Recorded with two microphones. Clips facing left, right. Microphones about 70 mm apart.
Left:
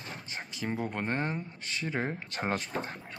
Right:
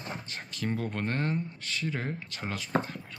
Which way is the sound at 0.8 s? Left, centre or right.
Centre.